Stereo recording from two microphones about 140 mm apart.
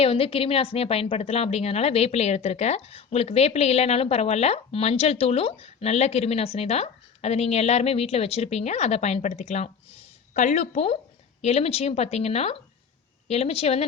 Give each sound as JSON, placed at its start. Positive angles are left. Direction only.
{"t": 0.0, "sound": "a woman's voice", "side_deg": 45}